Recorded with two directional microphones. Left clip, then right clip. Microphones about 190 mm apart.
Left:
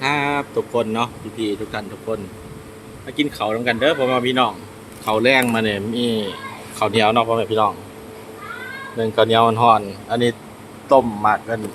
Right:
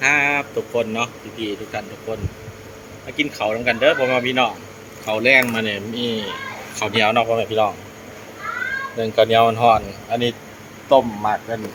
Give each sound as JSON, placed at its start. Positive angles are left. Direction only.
{"t": 0.0, "sound": "a man's voice", "side_deg": 25}
{"t": 3.2, "sound": "a man's voice", "side_deg": 30}
{"t": 9.0, "sound": "a man's voice", "side_deg": 20}